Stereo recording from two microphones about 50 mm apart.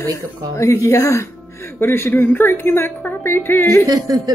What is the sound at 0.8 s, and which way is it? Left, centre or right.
Speech, left.